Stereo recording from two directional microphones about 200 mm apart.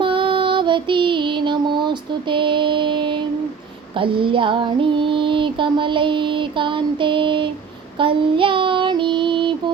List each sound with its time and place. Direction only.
0.0 s music: 25° right (ahead or behind)
3.9 s female singing: 25° right (ahead or behind)
7.9 s child singing: 25° right (ahead or behind)